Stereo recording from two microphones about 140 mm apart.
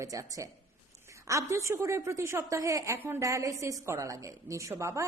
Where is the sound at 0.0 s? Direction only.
25° right (ahead or behind).